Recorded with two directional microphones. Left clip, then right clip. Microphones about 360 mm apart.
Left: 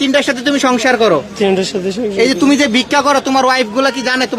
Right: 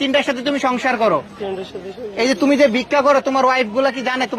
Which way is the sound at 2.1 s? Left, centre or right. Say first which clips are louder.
Left 2 dB; centre.